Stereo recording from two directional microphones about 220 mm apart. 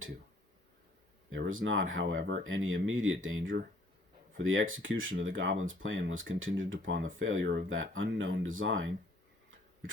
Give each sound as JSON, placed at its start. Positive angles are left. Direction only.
{"t": 1.3, "sound": "speech", "side_deg": -60}